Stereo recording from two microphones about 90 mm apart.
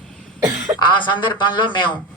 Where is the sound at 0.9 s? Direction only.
60° left (ahead or behind).